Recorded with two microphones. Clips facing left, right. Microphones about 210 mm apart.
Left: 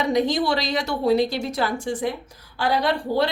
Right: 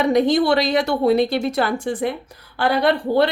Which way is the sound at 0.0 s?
60° right (ahead or behind).